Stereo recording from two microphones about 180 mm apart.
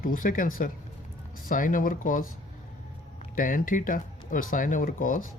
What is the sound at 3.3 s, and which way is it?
Speech, 50° left (ahead or behind).